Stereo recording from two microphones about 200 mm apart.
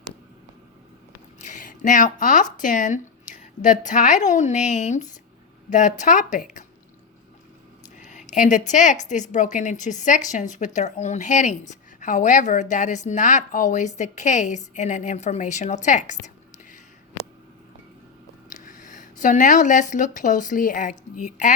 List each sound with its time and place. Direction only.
1.4 s a woman's voice: 40° left (ahead or behind)
7.9 s a sound: 40° left (ahead or behind)
9.0 s a woman's voice: 40° left (ahead or behind)
18.5 s speech: 40° left (ahead or behind)